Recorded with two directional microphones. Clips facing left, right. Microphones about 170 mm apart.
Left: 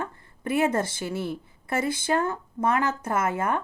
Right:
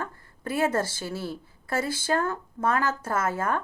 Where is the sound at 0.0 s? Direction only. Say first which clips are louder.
Left 2 dB; 20° left (ahead or behind).